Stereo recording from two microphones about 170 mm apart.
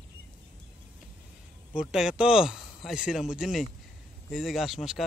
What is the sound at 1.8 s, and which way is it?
A man's voice, 5° right (ahead or behind).